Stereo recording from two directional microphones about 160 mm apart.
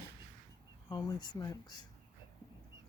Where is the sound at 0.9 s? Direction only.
25° left (ahead or behind).